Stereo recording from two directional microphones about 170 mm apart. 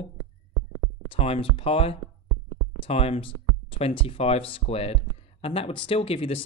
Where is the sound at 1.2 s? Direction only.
35° left (ahead or behind).